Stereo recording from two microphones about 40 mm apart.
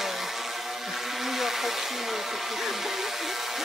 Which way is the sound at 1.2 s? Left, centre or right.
Centre.